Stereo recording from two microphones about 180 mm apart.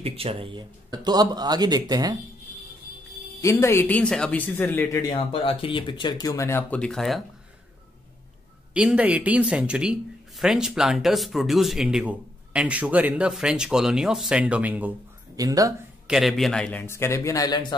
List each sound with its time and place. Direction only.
0.0 s speech: 30° right (ahead or behind)
3.3 s speech: 15° left (ahead or behind)
5.3 s speech: 30° left (ahead or behind); by 7.2 s centre (ahead or behind)
8.7 s speech: 5° right (ahead or behind)
15.3 s speech: 20° right (ahead or behind)
16.1 s speech: centre (ahead or behind); by 17.7 s 25° left (ahead or behind)